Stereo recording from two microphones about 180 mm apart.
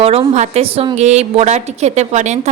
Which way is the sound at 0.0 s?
35° right (ahead or behind).